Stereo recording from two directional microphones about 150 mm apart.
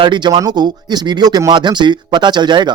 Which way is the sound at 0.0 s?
30° right (ahead or behind).